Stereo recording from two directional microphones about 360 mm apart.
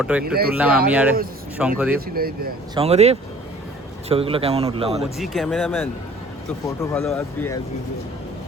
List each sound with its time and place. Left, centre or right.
0.0 s speech: centre
2.1 s speech: right
5.0 s speech: centre
6.9 s speech: centre